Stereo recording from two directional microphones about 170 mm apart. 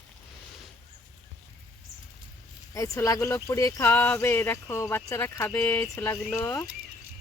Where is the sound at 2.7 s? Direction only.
20° left (ahead or behind).